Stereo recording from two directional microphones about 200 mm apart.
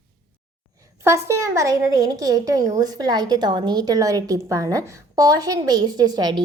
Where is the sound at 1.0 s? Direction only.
15° right (ahead or behind).